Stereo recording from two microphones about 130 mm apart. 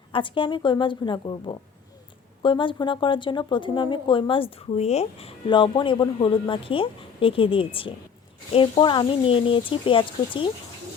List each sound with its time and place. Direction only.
0.1 s speech: 40° left (ahead or behind)
5.5 s a woman's voice: 40° left (ahead or behind)